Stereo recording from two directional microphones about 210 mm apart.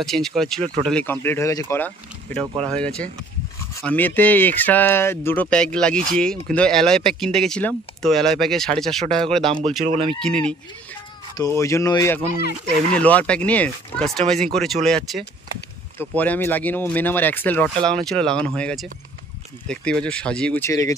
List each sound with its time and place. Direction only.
0.0 s speech: centre (ahead or behind)
9.5 s speech: 30° right (ahead or behind)
9.9 s speech: centre (ahead or behind)
11.3 s speech: 15° left (ahead or behind)
12.4 s speech: 45° left (ahead or behind)
12.9 s speech: 5° left (ahead or behind)